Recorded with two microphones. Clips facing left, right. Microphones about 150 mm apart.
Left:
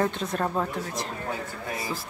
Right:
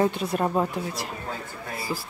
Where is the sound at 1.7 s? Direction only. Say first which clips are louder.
Right 1 dB; 20° left (ahead or behind).